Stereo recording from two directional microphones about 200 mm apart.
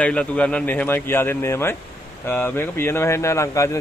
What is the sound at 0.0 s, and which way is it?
Speech, 5° left (ahead or behind).